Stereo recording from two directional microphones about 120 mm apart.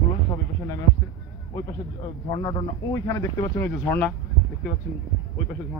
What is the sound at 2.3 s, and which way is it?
Speech, 35° left (ahead or behind).